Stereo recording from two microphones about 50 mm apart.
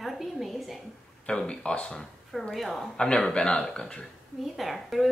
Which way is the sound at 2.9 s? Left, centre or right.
Centre.